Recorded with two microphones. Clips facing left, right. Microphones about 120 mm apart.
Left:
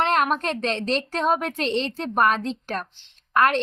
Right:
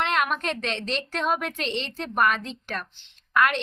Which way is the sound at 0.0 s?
40° left (ahead or behind).